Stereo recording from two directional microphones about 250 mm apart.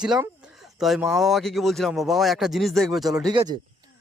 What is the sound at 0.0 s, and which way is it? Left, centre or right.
Speech, centre.